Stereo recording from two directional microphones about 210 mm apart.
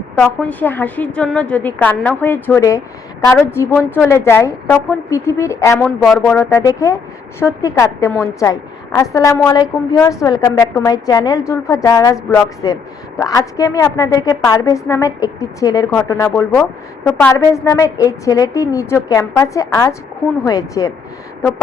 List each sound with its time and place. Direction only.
0.2 s a woman's voice: 10° left (ahead or behind)